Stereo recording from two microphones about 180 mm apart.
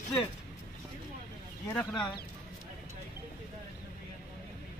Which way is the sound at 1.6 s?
20° left (ahead or behind).